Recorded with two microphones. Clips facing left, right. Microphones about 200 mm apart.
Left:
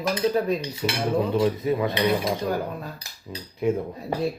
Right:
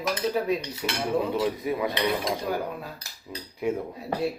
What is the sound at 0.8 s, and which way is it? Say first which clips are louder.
Cutlery: left 5 dB; 25° left (ahead or behind).